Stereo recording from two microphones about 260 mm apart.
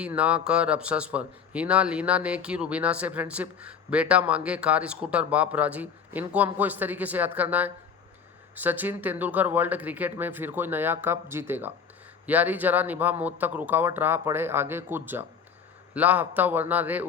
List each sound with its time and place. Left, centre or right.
0.0 s speech: centre